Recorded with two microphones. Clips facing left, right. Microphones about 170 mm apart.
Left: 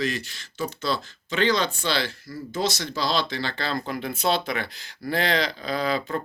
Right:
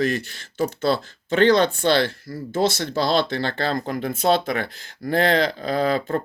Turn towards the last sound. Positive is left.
turn(degrees=-45)  # may be behind; listen again after turning